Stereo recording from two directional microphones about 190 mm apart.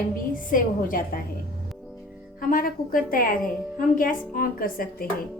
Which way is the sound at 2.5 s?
50° left (ahead or behind).